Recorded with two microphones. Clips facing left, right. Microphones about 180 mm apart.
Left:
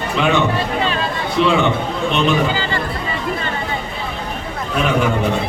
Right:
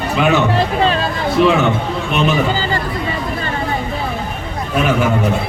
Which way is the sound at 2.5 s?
40° right (ahead or behind).